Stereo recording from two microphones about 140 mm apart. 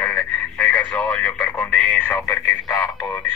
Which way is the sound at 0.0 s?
10° left (ahead or behind).